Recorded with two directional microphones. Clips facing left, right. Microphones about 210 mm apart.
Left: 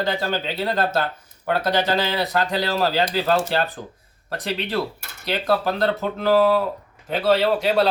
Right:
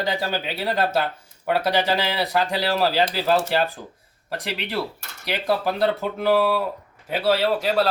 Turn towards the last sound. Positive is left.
turn(degrees=0)  # may be behind; listen again after turning